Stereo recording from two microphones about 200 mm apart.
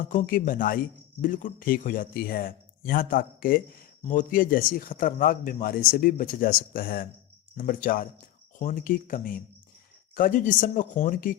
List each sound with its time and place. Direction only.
0.0 s speech: 40° left (ahead or behind)